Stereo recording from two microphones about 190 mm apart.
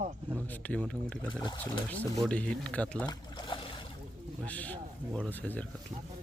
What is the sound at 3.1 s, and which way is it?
Trickle, 25° left (ahead or behind).